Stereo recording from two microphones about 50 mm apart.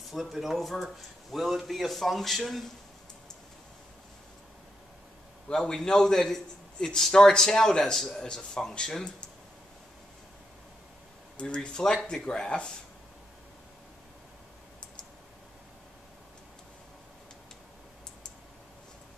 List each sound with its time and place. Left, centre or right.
0.1 s a man's voice: centre
5.5 s a man's voice: centre
11.3 s a man's voice: centre